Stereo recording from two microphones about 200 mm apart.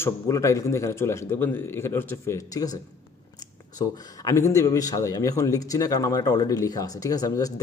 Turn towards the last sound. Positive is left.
turn(degrees=20)  # may be behind; listen again after turning